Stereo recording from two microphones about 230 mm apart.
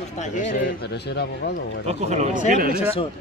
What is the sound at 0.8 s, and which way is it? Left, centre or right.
Speech, left.